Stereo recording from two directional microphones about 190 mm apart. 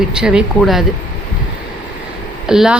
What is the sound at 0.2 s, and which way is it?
Speech, 5° right (ahead or behind).